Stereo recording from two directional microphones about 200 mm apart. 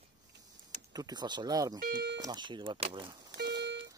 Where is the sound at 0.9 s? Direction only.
20° right (ahead or behind).